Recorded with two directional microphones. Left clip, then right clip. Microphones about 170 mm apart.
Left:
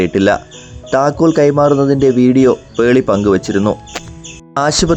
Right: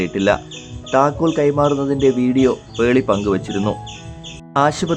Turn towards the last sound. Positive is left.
turn(degrees=35)  # may be behind; listen again after turning